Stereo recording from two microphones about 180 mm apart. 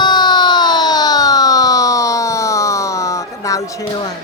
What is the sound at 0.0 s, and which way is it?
Siren, 25° left (ahead or behind).